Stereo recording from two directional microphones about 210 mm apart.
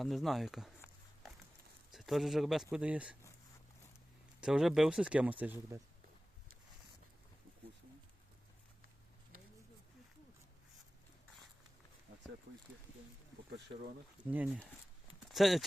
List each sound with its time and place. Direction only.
0.0 s speech: centre (ahead or behind)
1.9 s speech: centre (ahead or behind)
4.4 s speech: 5° right (ahead or behind)
14.3 s speech: 5° right (ahead or behind)